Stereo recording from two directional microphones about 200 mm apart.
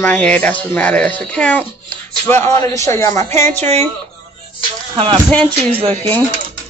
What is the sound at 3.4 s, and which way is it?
Speech, 30° right (ahead or behind).